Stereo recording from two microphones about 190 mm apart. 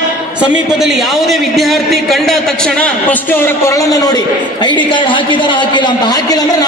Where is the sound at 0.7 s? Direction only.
Centre (ahead or behind).